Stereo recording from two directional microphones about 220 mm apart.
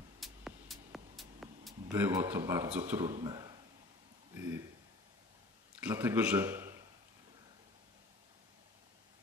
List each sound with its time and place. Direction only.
0.2 s music: centre (ahead or behind)
1.9 s a man's voice: 10° right (ahead or behind)
4.3 s a sound: 10° right (ahead or behind)
5.8 s a man's voice: 10° right (ahead or behind)